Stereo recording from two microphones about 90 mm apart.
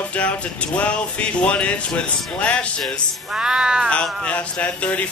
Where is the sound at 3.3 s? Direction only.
10° right (ahead or behind).